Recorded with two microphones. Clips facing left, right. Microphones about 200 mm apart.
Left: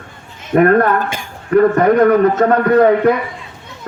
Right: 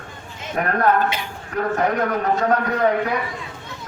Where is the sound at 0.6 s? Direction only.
60° left (ahead or behind).